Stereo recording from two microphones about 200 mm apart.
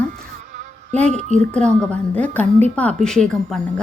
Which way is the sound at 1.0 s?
35° right (ahead or behind).